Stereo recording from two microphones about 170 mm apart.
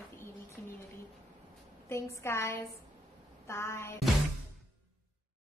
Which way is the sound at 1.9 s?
15° left (ahead or behind).